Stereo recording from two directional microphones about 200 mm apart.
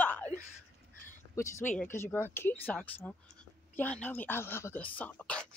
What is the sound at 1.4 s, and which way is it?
Speech, 15° left (ahead or behind).